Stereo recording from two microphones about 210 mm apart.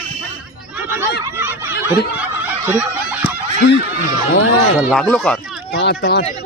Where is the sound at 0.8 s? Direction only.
10° right (ahead or behind).